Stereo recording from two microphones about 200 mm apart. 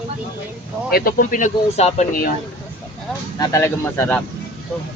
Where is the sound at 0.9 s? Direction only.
50° left (ahead or behind).